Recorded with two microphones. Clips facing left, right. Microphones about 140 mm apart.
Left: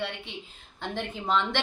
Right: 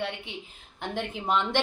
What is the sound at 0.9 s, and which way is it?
Speech, 15° right (ahead or behind).